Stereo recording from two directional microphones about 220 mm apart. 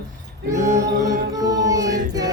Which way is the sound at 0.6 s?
35° right (ahead or behind).